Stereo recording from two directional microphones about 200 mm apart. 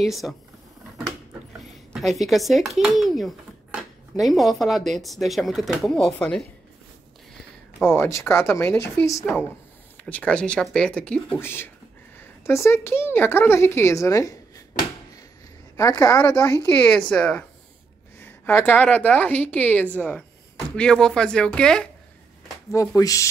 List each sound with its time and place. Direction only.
0.0 s speech: centre (ahead or behind)
2.0 s speech: centre (ahead or behind)
7.8 s a woman's voice: 10° left (ahead or behind)
9.2 s a woman's voice: centre (ahead or behind); by 14.3 s 15° left (ahead or behind)
15.7 s a woman's voice: 15° left (ahead or behind)
22.7 s a woman's voice: 15° left (ahead or behind)